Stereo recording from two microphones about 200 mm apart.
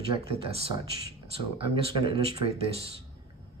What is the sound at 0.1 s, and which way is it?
Speech, 30° right (ahead or behind).